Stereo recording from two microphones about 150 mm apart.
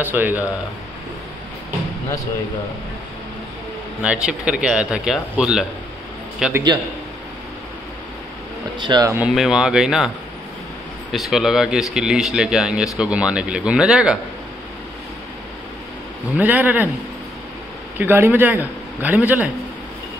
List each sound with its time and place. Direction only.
0.0 s speech: 10° right (ahead or behind)
4.0 s speech: 5° right (ahead or behind)
8.7 s speech: 30° right (ahead or behind)
9.3 s speech: 5° right (ahead or behind)
16.3 s speech: 10° right (ahead or behind)
17.9 s speech: 15° right (ahead or behind)